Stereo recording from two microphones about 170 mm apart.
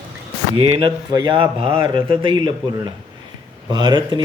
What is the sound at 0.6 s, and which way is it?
Speech, 30° right (ahead or behind).